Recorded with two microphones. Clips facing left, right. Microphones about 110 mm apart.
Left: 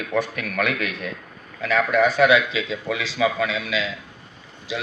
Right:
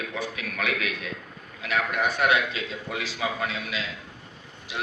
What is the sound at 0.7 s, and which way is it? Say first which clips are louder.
Speech: left 3 dB; 50° left (ahead or behind).